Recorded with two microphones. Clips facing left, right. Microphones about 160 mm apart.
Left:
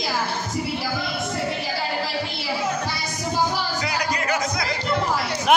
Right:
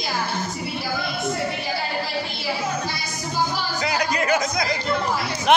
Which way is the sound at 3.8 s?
25° right (ahead or behind).